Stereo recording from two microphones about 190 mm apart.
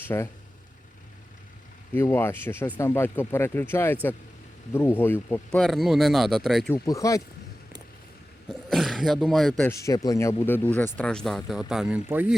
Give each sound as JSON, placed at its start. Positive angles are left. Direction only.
{"t": 0.1, "sound": "speech", "side_deg": 15}
{"t": 2.0, "sound": "speech", "side_deg": 15}
{"t": 6.7, "sound": "speech", "side_deg": 15}
{"t": 8.4, "sound": "speech", "side_deg": 0}
{"t": 9.6, "sound": "speech", "side_deg": 15}